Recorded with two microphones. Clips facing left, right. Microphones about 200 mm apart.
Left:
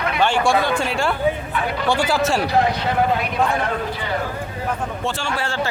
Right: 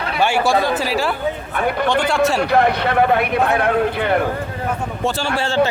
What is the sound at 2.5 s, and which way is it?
Speech, 60° right (ahead or behind).